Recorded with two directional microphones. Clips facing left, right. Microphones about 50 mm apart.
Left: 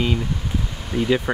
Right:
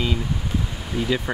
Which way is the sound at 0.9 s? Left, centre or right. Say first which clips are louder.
Left 3 dB; centre.